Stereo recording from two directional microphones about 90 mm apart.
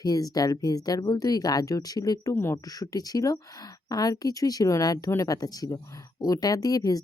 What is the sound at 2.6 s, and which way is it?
Speech, 45° left (ahead or behind).